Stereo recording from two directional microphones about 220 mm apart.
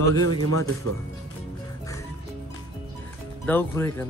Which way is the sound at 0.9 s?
90° right.